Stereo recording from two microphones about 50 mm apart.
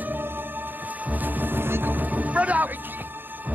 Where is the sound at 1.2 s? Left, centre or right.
Right.